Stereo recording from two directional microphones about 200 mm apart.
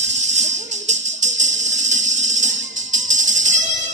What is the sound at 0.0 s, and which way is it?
Music, 35° right (ahead or behind).